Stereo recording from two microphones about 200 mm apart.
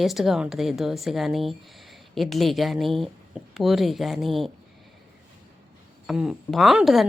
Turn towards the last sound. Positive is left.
turn(degrees=0)  # may be behind; listen again after turning